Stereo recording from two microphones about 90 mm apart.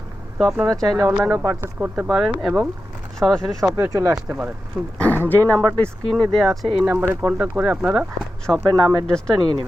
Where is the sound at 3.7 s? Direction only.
30° right (ahead or behind).